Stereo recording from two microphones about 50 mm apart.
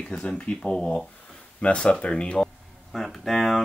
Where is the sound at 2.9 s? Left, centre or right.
Centre.